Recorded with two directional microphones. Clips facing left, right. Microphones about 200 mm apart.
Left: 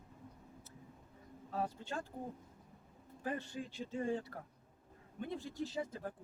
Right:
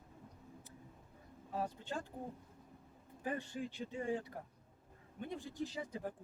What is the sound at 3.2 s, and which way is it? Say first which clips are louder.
Speech: even; 15° right (ahead or behind).